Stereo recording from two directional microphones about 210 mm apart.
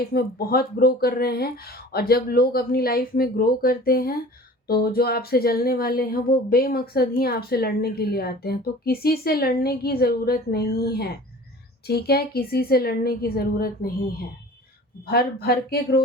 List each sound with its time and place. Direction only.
0.1 s speech: 45° left (ahead or behind)